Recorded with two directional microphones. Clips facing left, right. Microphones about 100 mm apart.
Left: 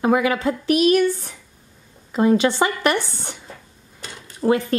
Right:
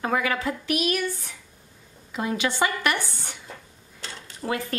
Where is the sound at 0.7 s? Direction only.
35° left (ahead or behind).